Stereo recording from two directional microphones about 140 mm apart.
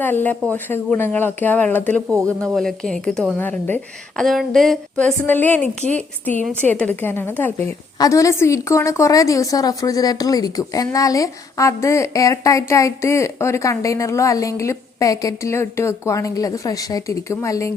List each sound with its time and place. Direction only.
0.0 s a woman's voice: 15° left (ahead or behind)
4.2 s a woman's voice: centre (ahead or behind)
5.2 s a woman's voice: 15° left (ahead or behind)